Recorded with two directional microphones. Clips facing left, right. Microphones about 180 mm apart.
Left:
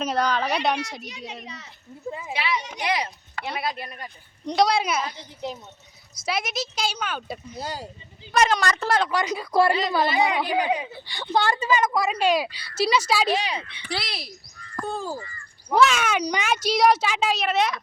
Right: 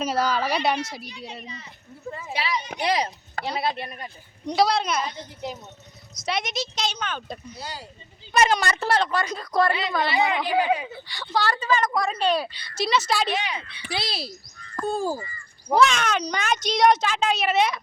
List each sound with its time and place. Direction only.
0.0 s speech: 5° right (ahead or behind)
1.0 s a child's voice: 75° left (ahead or behind)
2.0 s a woman's voice: 15° left (ahead or behind)
2.3 s a child's voice: 35° right (ahead or behind)
4.4 s a woman's voice: centre (ahead or behind)
7.6 s speech: 45° left (ahead or behind)
8.3 s a woman's voice: 5° right (ahead or behind); by 11.6 s 20° left (ahead or behind)
11.6 s a woman's voice: 10° left (ahead or behind)
13.3 s speech: 30° left (ahead or behind)
14.0 s speech: 30° right (ahead or behind)
14.8 s a child's voice: 40° right (ahead or behind)
15.7 s speech: centre (ahead or behind)